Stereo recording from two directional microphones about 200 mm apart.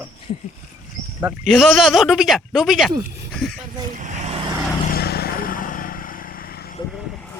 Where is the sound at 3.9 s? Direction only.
35° right (ahead or behind).